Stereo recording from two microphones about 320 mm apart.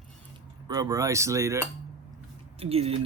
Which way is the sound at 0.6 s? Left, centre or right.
Centre.